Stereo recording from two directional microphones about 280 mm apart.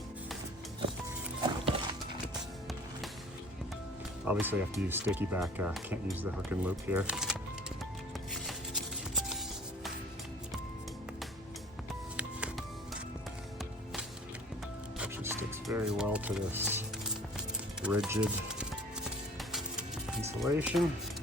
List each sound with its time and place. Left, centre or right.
1.5 s music: centre
2.2 s music: centre
4.3 s speech: centre
8.3 s music: centre
12.1 s music: centre
14.9 s music: centre
17.8 s speech: centre
19.4 s music: centre